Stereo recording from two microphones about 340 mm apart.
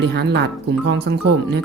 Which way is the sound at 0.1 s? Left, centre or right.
Right.